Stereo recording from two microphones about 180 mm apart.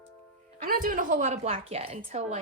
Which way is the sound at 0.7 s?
50° right (ahead or behind).